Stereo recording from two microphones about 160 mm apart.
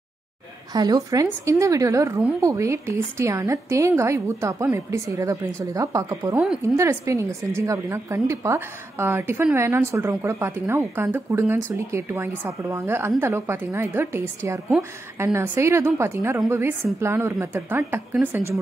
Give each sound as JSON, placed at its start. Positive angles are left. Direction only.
{"t": 0.7, "sound": "a woman's voice", "side_deg": -25}
{"t": 6.4, "sound": "a woman's voice", "side_deg": 0}
{"t": 6.8, "sound": "a woman's voice", "side_deg": -15}